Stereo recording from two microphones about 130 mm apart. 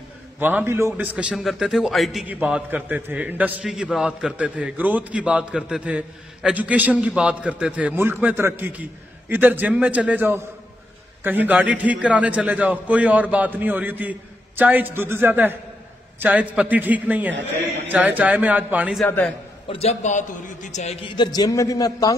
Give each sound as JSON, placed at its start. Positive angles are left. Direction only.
{"t": 0.4, "sound": "a man's voice", "side_deg": -15}
{"t": 19.7, "sound": "a man's voice", "side_deg": 50}
{"t": 21.1, "sound": "a man's voice", "side_deg": 35}